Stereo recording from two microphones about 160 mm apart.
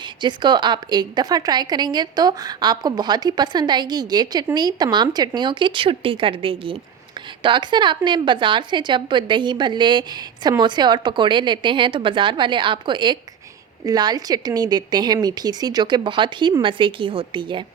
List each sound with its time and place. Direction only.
0.2 s a woman's voice: 30° right (ahead or behind)